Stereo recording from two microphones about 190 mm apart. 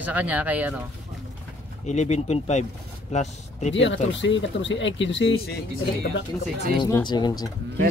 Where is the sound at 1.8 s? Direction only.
35° left (ahead or behind).